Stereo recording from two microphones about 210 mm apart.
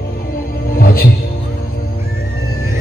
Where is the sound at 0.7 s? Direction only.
45° left (ahead or behind).